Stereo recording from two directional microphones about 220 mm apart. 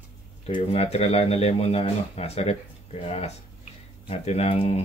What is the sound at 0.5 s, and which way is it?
Speech, 25° left (ahead or behind).